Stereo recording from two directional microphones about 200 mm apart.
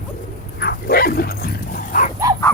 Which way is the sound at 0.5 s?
50° left (ahead or behind).